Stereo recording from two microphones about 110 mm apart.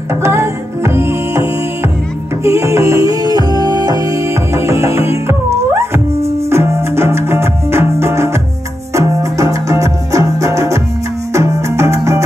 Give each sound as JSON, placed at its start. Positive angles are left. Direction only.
{"t": 0.1, "sound": "music", "side_deg": -25}